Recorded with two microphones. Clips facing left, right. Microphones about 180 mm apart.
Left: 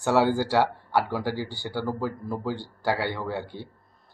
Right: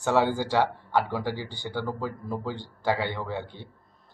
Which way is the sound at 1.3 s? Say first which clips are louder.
Left 3 dB; 20° right (ahead or behind).